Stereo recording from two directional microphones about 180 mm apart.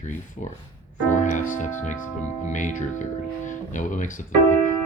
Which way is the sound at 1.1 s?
45° left (ahead or behind).